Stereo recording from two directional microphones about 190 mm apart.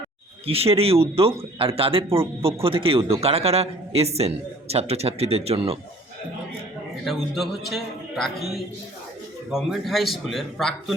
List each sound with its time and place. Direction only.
0.4 s speech: 30° right (ahead or behind)
7.0 s a man's voice: centre (ahead or behind)
9.5 s a man's voice: centre (ahead or behind)